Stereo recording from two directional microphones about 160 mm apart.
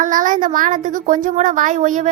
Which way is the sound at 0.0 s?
55° right (ahead or behind).